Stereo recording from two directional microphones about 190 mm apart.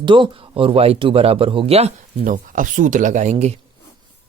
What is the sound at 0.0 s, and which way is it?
Speech, 25° right (ahead or behind).